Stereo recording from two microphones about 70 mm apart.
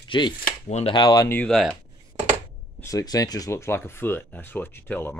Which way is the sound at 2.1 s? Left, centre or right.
Right.